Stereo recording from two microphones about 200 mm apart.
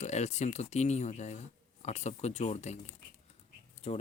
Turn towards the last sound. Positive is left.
turn(degrees=30)  # may be behind; listen again after turning